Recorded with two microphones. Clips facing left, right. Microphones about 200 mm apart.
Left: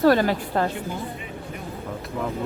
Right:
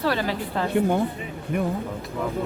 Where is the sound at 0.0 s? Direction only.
45° left (ahead or behind).